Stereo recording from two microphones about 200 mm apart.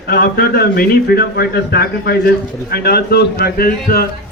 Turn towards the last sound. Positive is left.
turn(degrees=50)  # may be behind; listen again after turning